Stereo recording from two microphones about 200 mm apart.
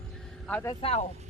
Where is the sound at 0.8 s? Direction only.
30° left (ahead or behind).